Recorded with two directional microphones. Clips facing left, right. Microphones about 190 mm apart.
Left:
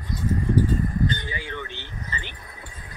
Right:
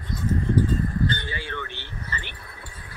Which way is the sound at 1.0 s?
15° left (ahead or behind).